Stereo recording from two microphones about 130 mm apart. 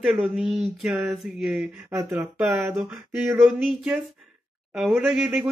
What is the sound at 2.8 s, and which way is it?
Speech, centre (ahead or behind).